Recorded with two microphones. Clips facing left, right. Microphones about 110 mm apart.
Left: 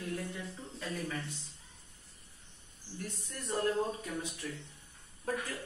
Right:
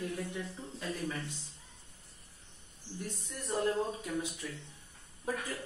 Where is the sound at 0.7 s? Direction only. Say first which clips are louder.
Right 1 dB; 10° right (ahead or behind).